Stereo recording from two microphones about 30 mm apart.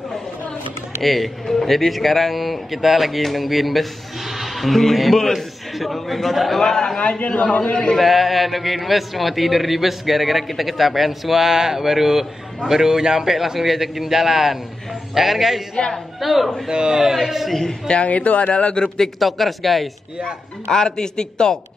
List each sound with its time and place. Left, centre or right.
1.0 s a man's voice: centre
1.4 s speech: centre
1.7 s a man's voice: centre
6.6 s speech: centre
7.0 s a man's voice: left
8.0 s a man's voice: centre
15.7 s speech: left
16.2 s a man's voice: centre
16.6 s a man's voice: right
17.0 s a man's voice: centre
18.0 s speech: left
18.5 s a man's voice: left
19.1 s a man's voice: centre
20.6 s speech: left